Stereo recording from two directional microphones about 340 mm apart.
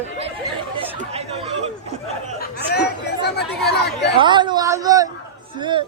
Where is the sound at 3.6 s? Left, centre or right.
Left.